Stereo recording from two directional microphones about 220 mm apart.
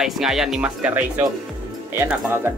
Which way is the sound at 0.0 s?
Centre (ahead or behind).